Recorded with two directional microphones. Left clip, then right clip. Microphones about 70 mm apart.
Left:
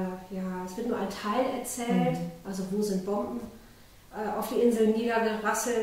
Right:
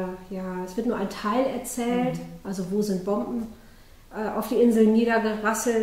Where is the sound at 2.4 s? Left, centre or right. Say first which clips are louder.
Right 5 dB; right.